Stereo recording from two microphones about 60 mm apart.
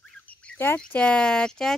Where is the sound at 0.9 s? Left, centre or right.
Centre.